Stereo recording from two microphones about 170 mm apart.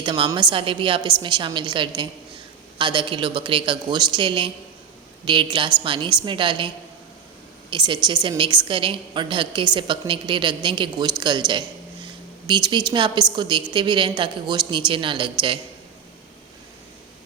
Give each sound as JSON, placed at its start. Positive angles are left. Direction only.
{"t": 0.0, "sound": "a woman's voice", "side_deg": -25}